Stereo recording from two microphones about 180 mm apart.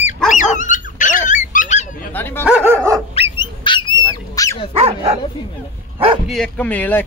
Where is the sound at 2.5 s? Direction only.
10° right (ahead or behind).